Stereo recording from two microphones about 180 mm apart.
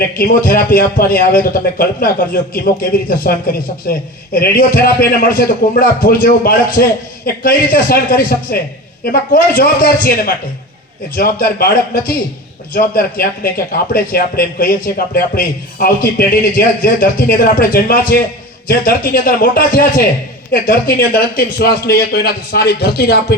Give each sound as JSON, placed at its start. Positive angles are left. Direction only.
{"t": 0.0, "sound": "a man's voice", "side_deg": 55}